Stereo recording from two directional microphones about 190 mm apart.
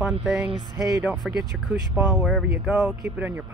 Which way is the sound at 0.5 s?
20° right (ahead or behind).